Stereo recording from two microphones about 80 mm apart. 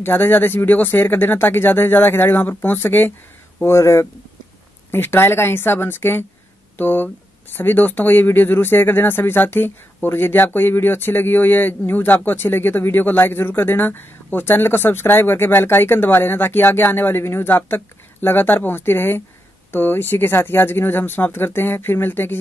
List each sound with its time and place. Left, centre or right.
0.0 s speech: left
3.6 s speech: left